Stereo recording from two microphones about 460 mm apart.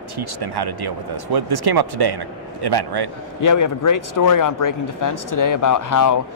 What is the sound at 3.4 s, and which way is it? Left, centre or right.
Speech, left.